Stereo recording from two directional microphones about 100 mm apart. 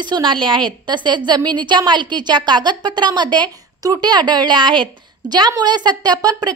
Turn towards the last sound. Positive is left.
turn(degrees=-40)  # may be behind; listen again after turning